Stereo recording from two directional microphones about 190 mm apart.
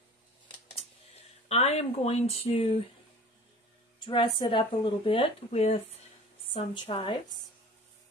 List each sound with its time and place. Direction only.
1.5 s speech: 35° left (ahead or behind)
4.0 s speech: 25° left (ahead or behind)